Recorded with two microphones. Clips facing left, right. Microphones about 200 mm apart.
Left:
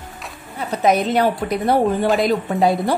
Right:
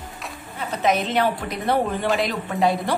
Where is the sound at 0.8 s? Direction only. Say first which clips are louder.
Left 4 dB; 40° left (ahead or behind).